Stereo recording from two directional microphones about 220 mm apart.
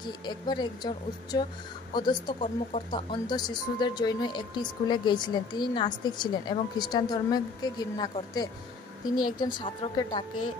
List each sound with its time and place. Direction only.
0.2 s speech: 20° left (ahead or behind)